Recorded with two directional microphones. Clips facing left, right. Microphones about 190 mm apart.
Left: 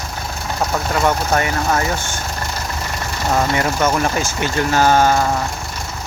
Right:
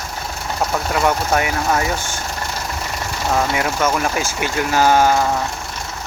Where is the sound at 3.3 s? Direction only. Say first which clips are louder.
Left 1 dB; centre (ahead or behind).